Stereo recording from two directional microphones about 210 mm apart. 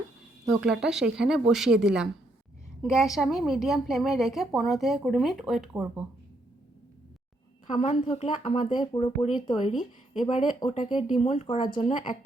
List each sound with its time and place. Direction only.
0.4 s a woman's voice: 5° right (ahead or behind)
7.7 s speech: 35° left (ahead or behind)
9.6 s speech: 35° left (ahead or behind)